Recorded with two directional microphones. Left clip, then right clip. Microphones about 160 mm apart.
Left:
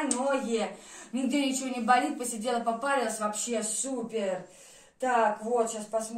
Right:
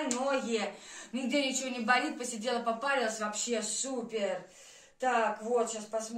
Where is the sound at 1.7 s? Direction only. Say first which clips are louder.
Left 6 dB; 10° right (ahead or behind).